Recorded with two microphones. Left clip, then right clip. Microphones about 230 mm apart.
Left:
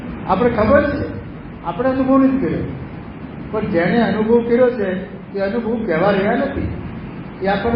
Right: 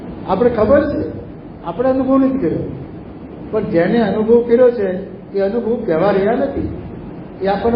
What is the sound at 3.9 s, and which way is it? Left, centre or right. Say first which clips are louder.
A man's voice: right 2 dB; centre.